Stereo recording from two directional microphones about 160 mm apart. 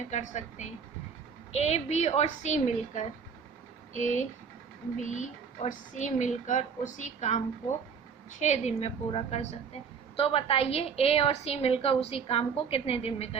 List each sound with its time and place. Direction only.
0.1 s a woman's voice: 45° left (ahead or behind)